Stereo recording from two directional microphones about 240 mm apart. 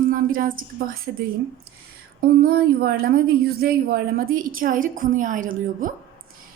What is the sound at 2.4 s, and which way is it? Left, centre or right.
A woman's voice, right.